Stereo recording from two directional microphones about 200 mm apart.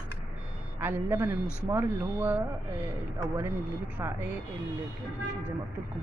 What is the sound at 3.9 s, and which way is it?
Speech, 10° right (ahead or behind).